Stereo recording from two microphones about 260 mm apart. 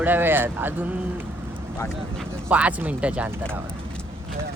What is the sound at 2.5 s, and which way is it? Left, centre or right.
Speech, centre.